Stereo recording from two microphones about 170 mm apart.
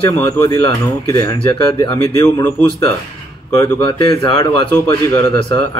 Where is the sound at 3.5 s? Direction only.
25° left (ahead or behind).